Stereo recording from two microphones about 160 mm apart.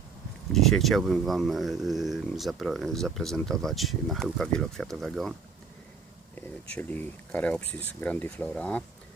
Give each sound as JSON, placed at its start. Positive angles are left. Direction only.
{"t": 0.5, "sound": "speech", "side_deg": 0}
{"t": 6.3, "sound": "speech", "side_deg": 10}